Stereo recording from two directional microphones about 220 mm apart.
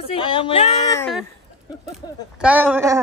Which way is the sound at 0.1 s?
25° left (ahead or behind).